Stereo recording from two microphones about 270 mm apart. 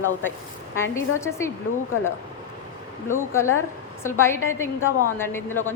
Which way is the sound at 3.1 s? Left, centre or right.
Centre.